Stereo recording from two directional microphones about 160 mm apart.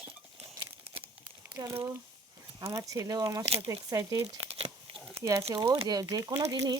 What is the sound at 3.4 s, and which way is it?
Speech, 40° right (ahead or behind).